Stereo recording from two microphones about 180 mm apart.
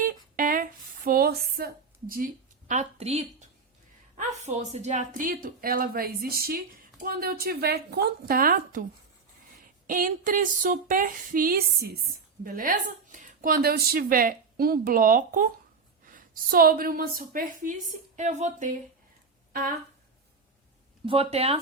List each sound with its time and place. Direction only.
0.0 s a sound: 50° right (ahead or behind); by 3.5 s 35° right (ahead or behind)
4.2 s a woman's voice: 40° right (ahead or behind)
9.8 s a woman's voice: 50° right (ahead or behind)
21.1 s a woman's voice: 35° right (ahead or behind)